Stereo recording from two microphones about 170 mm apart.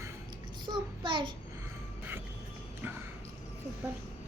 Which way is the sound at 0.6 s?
25° right (ahead or behind).